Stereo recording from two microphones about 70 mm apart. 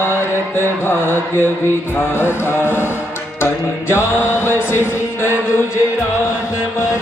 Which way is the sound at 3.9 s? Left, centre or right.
Left.